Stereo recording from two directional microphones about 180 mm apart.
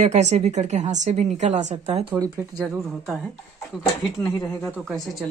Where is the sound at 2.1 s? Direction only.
20° right (ahead or behind).